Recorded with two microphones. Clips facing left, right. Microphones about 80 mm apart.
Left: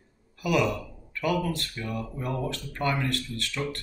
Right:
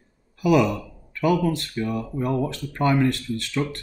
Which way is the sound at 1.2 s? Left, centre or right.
Centre.